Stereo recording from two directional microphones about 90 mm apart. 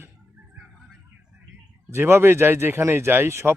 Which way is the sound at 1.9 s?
25° right (ahead or behind).